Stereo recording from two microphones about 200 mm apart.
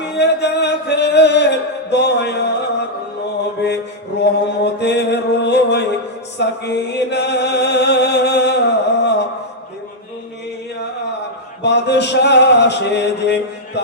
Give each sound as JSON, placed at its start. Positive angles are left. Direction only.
{"t": 0.2, "sound": "music", "side_deg": 55}
{"t": 4.2, "sound": "mantra", "side_deg": 55}
{"t": 6.4, "sound": "chant", "side_deg": 60}
{"t": 11.6, "sound": "a sound", "side_deg": 60}